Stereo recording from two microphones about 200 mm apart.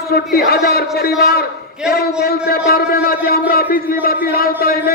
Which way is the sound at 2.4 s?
50° left (ahead or behind).